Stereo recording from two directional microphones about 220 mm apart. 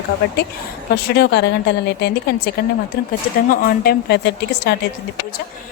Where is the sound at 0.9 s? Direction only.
50° left (ahead or behind).